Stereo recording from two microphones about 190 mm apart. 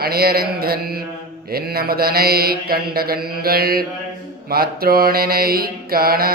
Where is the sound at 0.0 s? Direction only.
55° right (ahead or behind).